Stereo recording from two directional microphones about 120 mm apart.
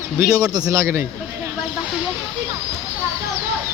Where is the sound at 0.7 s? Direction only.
25° right (ahead or behind).